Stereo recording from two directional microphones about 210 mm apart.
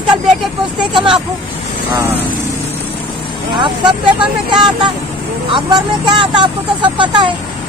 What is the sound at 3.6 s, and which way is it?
Speech, 20° right (ahead or behind).